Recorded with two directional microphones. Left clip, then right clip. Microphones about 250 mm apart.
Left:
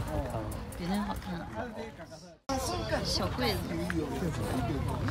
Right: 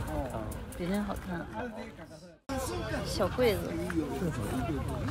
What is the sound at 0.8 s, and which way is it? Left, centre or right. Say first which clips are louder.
Speech: right 1 dB; centre.